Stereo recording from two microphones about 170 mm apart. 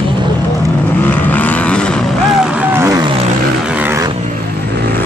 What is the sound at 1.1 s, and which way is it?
Vehicle, 10° left (ahead or behind).